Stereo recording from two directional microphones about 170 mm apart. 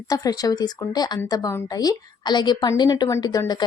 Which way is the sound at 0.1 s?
20° left (ahead or behind).